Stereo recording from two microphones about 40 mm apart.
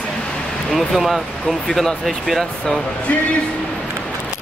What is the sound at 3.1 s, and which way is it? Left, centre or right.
Speech, left.